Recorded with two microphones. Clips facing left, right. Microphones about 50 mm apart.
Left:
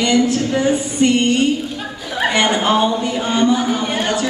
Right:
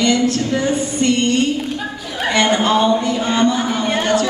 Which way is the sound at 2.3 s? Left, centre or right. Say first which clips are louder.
Right 2 dB; centre.